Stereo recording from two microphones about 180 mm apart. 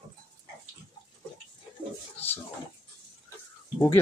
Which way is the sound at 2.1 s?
10° left (ahead or behind).